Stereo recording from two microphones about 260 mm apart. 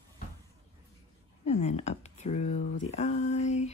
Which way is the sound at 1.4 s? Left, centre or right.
Left.